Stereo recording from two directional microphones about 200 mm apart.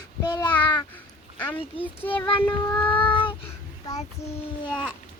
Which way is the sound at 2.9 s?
25° left (ahead or behind).